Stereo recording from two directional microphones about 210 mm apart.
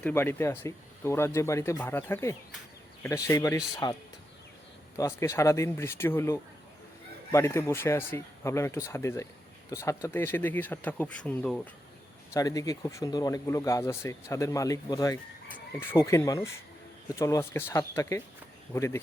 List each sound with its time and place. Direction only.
0.0 s speech: 10° left (ahead or behind)
12.3 s speech: 15° left (ahead or behind)